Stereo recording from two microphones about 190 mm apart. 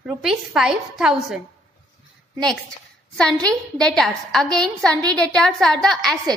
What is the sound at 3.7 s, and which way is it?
A woman's voice, 5° left (ahead or behind).